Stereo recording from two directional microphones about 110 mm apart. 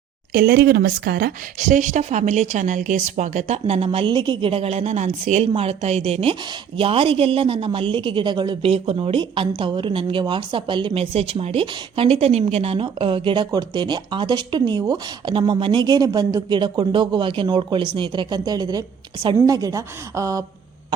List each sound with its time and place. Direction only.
1.8 s a woman's voice: 90° right; by 11.0 s 45° right (ahead or behind)
11.0 s a woman's voice: 65° right (ahead or behind)
12.2 s a woman's voice: 65° right (ahead or behind); by 20.4 s 30° right (ahead or behind)